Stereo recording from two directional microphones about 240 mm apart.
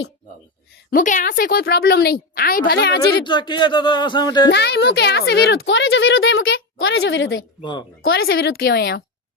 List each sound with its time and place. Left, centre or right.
0.9 s speech: left
3.2 s speech: centre
4.5 s a woman's voice: left
7.6 s speech: centre
8.0 s speech: left